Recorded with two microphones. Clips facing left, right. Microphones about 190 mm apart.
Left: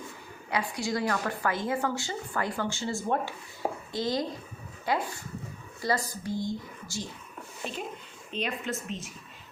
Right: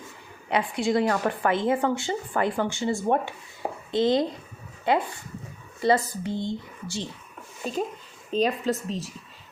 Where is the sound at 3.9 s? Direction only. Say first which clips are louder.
Right 10 dB; 25° right (ahead or behind).